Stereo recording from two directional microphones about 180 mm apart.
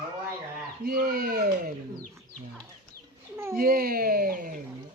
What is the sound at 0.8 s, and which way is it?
Speech, 55° right (ahead or behind).